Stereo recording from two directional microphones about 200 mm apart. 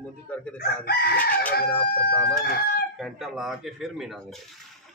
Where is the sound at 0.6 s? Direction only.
50° left (ahead or behind).